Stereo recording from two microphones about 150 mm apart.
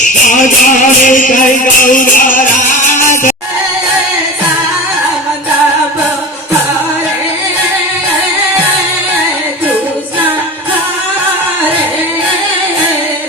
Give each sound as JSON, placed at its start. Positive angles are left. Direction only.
{"t": 0.6, "sound": "music", "side_deg": 60}